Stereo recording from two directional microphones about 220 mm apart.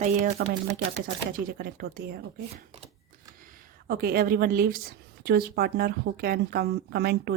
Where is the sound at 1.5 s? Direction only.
45° right (ahead or behind).